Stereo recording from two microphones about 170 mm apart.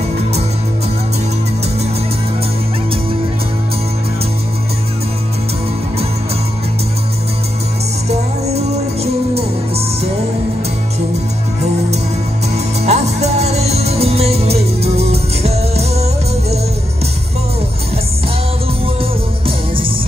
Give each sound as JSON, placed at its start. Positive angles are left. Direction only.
{"t": 8.1, "sound": "music", "side_deg": -40}
{"t": 12.8, "sound": "music", "side_deg": -40}